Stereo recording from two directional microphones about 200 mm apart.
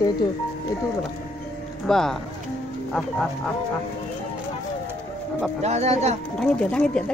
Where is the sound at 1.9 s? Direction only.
Centre (ahead or behind).